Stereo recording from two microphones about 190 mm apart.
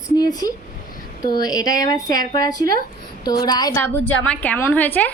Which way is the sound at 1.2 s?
50° right (ahead or behind).